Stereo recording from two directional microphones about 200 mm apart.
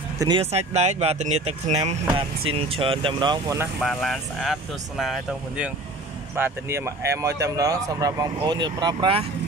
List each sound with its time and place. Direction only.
0.2 s speech: 25° right (ahead or behind)
3.8 s speech: centre (ahead or behind)
6.3 s speech: 10° right (ahead or behind)